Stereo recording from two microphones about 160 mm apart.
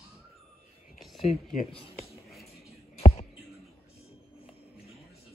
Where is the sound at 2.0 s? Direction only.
Centre (ahead or behind).